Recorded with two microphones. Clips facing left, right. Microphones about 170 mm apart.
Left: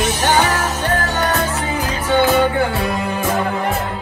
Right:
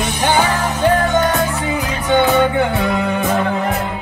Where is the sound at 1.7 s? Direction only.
20° right (ahead or behind).